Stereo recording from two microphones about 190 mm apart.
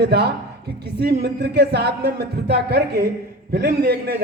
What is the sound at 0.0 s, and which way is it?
A man's voice, 60° right (ahead or behind).